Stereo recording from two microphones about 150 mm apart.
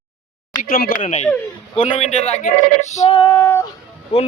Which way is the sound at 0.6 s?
75° left (ahead or behind).